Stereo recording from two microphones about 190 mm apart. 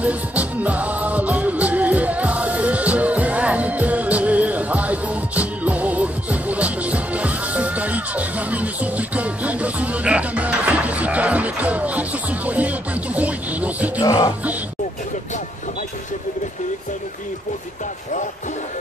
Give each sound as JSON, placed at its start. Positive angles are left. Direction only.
{"t": 0.0, "sound": "music", "side_deg": -5}
{"t": 14.0, "sound": "music", "side_deg": 20}